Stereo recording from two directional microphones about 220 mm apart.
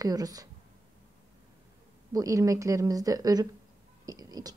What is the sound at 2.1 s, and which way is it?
A woman's voice, 15° right (ahead or behind).